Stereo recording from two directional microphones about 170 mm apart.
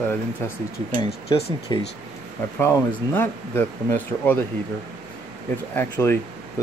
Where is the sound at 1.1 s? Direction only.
35° left (ahead or behind).